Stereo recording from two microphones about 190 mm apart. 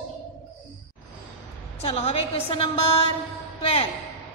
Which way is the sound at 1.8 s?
30° left (ahead or behind).